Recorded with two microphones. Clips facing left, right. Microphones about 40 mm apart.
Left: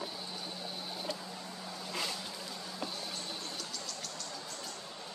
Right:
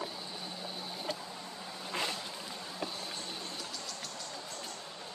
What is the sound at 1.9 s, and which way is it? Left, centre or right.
Vehicle, right.